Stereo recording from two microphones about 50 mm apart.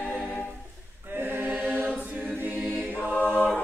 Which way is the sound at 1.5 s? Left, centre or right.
Right.